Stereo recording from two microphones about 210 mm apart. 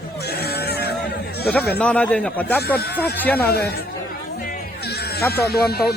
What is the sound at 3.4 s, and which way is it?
Speech, 50° left (ahead or behind).